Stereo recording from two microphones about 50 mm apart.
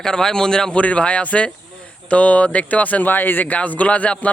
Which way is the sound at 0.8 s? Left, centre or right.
Left.